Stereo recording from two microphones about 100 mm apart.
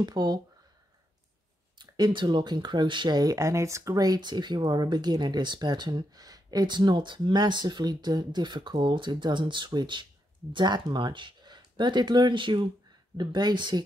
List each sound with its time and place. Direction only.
0.0 s speech: 45° right (ahead or behind)
1.8 s speech: 50° right (ahead or behind)